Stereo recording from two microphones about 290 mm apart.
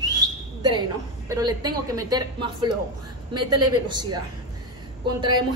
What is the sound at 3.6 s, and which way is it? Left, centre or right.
Speech, right.